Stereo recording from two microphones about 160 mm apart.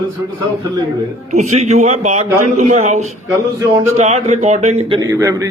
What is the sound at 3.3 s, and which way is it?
Speech, 20° right (ahead or behind).